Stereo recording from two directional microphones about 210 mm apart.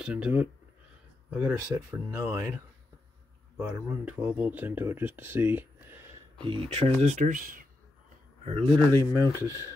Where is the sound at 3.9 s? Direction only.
10° right (ahead or behind).